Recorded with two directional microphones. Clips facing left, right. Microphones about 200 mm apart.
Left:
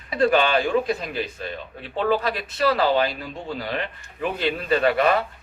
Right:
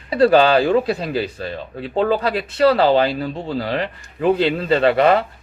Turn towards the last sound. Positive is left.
turn(degrees=-30)  # may be behind; listen again after turning